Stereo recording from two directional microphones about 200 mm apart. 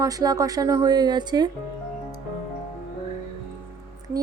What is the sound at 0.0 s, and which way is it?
A woman's voice, 20° right (ahead or behind).